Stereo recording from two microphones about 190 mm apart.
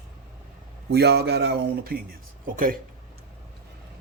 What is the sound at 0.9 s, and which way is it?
Speech, 60° right (ahead or behind).